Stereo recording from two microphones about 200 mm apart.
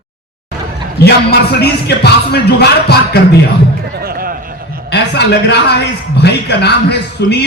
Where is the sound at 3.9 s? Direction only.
50° right (ahead or behind).